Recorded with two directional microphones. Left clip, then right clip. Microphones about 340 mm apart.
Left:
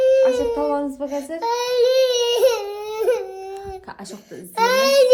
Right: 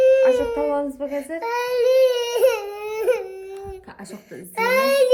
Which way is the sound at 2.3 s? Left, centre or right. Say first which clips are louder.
Left 1 dB; centre.